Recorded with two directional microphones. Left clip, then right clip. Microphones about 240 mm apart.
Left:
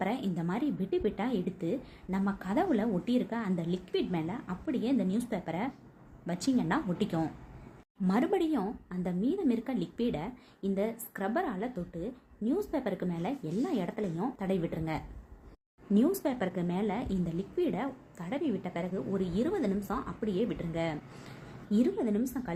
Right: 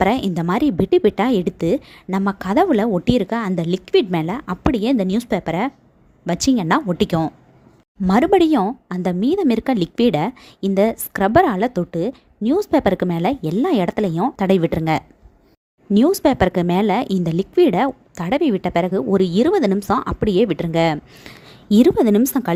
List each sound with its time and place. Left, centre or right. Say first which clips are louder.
0.0 s a woman's voice: right 16 dB; right